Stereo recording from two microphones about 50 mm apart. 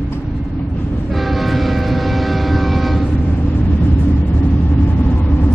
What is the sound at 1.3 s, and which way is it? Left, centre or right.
Vehicle, centre.